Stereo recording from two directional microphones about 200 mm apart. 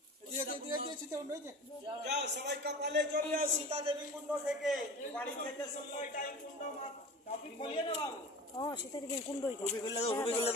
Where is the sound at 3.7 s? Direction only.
30° right (ahead or behind).